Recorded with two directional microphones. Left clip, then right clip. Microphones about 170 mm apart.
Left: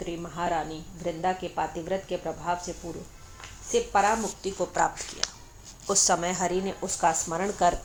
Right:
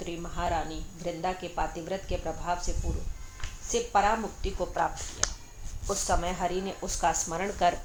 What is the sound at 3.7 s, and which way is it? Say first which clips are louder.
A woman's voice: left 2 dB; 30° left (ahead or behind).